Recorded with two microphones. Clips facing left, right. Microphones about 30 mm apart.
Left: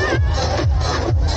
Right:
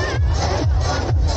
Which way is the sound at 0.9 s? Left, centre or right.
Centre.